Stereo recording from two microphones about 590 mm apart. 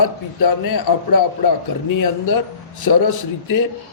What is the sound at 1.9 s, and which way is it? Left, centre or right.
A man's voice, left.